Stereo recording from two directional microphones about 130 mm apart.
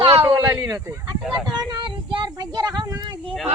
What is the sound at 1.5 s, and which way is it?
Speech, 35° right (ahead or behind).